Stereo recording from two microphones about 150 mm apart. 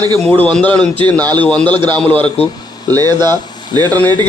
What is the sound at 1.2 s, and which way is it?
Speech, 30° right (ahead or behind).